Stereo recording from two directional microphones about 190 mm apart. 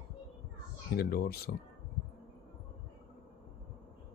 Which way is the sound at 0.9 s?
55° left (ahead or behind).